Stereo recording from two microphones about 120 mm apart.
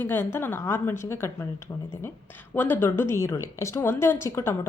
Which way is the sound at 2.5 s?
15° left (ahead or behind).